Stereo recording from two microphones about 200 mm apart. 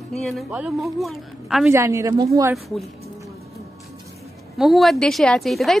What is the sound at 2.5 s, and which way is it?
Speech, centre (ahead or behind).